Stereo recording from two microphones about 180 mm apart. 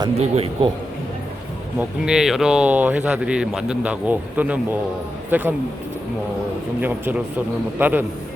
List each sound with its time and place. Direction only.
0.2 s a man's voice: 35° right (ahead or behind)
2.0 s speech: 5° right (ahead or behind)
6.8 s speech: 10° right (ahead or behind)